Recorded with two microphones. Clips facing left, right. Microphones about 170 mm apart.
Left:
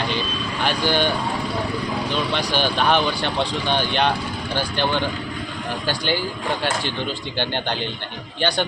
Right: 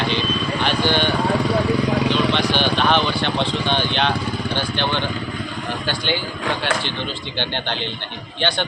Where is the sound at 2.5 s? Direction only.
10° left (ahead or behind).